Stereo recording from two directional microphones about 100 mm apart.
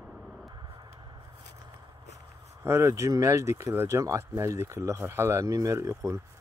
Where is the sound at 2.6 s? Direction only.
30° right (ahead or behind).